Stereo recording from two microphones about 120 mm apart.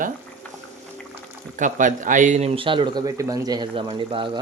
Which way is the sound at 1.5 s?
90° right.